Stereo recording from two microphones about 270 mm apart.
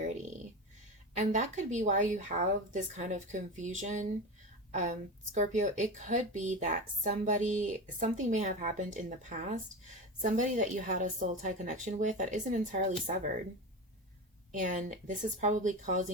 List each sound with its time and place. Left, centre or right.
1.1 s a woman's voice: right
14.6 s a woman's voice: right